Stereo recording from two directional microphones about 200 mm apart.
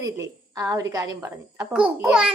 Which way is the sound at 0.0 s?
15° right (ahead or behind).